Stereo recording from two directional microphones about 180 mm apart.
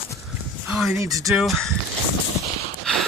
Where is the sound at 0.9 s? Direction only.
20° right (ahead or behind).